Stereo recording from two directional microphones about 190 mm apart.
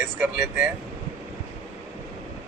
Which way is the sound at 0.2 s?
10° right (ahead or behind).